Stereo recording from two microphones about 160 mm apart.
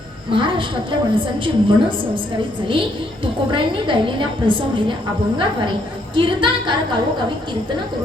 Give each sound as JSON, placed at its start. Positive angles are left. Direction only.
{"t": 0.3, "sound": "a woman's voice", "side_deg": -30}